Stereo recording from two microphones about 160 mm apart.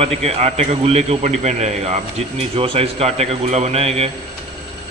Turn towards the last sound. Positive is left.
turn(degrees=-40)  # may be behind; listen again after turning